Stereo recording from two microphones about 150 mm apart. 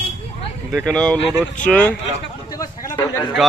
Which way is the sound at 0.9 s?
5° left (ahead or behind).